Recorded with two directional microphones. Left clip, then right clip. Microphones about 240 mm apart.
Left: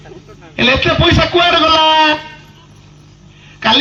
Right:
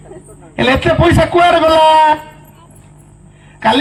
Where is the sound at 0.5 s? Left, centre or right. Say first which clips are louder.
Even; right.